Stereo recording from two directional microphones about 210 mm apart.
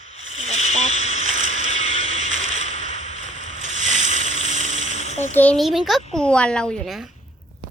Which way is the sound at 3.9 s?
30° left (ahead or behind).